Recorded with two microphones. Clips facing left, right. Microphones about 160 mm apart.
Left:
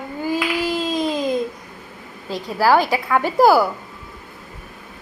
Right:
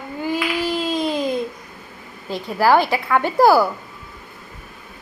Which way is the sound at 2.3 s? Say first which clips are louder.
Even; 40° left (ahead or behind).